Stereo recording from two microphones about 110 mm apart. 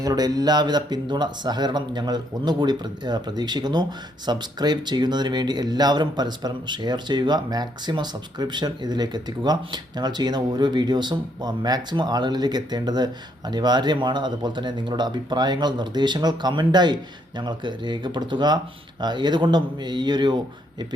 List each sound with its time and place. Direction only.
0.0 s speech: 35° right (ahead or behind)